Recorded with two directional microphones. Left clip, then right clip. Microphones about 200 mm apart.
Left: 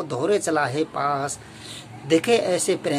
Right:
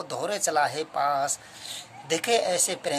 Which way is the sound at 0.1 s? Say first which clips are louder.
Left 5 dB; 35° right (ahead or behind).